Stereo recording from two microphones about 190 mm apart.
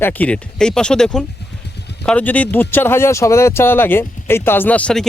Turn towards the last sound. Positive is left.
turn(degrees=5)  # may be behind; listen again after turning